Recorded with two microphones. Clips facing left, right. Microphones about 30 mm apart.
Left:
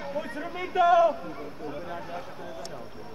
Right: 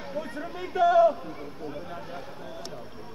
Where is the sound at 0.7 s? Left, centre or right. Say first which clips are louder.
Even; left.